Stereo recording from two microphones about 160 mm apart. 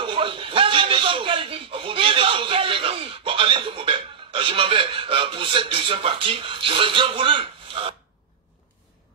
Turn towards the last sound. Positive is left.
turn(degrees=-35)  # may be behind; listen again after turning